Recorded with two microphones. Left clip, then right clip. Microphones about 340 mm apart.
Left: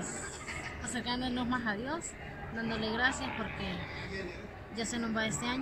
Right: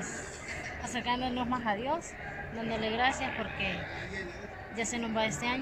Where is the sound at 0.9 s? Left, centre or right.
Right.